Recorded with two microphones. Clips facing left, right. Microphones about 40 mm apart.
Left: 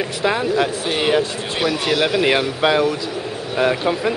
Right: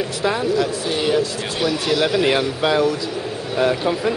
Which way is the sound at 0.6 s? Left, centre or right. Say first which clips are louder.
Left 1 dB; left.